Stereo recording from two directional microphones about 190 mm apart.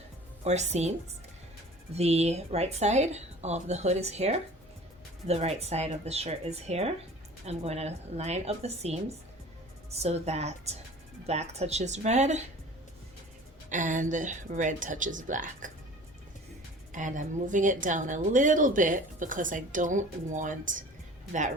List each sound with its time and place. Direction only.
0.4 s speech: 35° right (ahead or behind)
13.7 s a woman's voice: 40° right (ahead or behind)
16.9 s a woman's voice: 40° right (ahead or behind)